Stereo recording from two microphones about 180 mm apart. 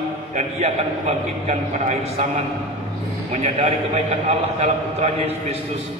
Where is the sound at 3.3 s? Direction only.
35° right (ahead or behind).